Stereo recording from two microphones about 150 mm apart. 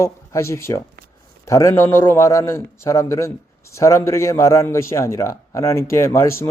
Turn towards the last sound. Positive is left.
turn(degrees=15)  # may be behind; listen again after turning